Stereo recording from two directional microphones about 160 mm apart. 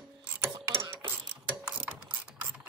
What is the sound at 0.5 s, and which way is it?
Mechanisms, 30° right (ahead or behind).